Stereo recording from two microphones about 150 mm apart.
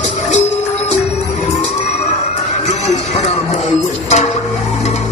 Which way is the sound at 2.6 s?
45° left (ahead or behind).